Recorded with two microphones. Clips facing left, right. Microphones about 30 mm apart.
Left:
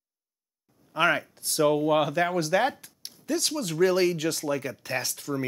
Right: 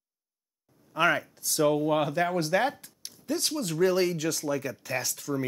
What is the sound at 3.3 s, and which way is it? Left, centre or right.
Speech, left.